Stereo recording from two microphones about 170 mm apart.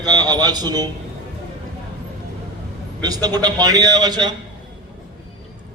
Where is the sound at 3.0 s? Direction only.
25° right (ahead or behind).